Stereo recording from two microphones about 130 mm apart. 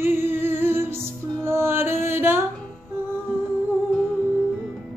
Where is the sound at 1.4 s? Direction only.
20° right (ahead or behind).